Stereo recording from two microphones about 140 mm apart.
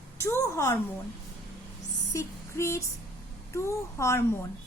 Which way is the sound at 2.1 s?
20° left (ahead or behind).